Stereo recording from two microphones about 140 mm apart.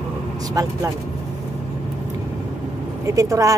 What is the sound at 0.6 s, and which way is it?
Speech, 25° right (ahead or behind).